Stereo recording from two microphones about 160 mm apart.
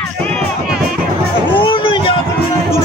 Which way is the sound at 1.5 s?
30° left (ahead or behind).